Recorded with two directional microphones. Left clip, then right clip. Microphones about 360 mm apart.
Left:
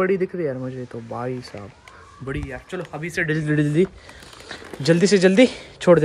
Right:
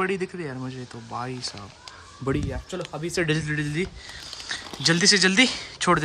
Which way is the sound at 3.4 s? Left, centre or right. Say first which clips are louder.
Left 8 dB; centre.